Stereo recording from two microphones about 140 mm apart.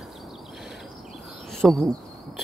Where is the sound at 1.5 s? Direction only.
Centre (ahead or behind).